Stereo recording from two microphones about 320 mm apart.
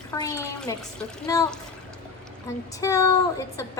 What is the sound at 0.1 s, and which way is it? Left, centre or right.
A woman's voice, centre.